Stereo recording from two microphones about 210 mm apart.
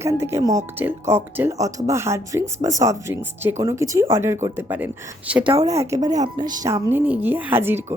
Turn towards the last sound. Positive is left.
turn(degrees=-10)  # may be behind; listen again after turning